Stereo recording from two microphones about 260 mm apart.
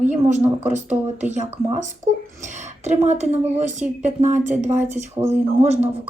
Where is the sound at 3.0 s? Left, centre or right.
Right.